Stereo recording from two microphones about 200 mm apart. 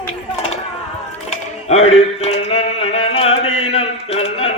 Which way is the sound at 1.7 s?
30° left (ahead or behind).